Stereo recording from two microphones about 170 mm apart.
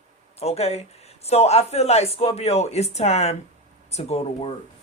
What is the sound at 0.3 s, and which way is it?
Speech, 35° left (ahead or behind).